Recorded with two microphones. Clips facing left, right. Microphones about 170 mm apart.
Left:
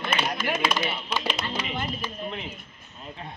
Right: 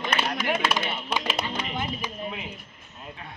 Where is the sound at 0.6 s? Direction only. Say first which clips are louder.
Left 1 dB; centre (ahead or behind).